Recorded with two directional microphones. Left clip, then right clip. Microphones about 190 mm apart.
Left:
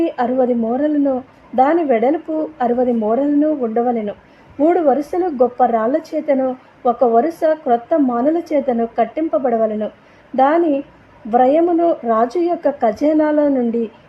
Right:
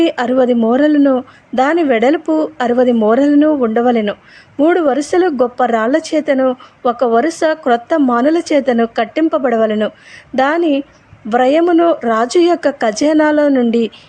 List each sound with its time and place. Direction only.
0.0 s a woman's voice: 15° right (ahead or behind)